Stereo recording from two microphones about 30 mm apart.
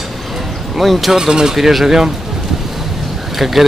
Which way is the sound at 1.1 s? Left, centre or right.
Centre.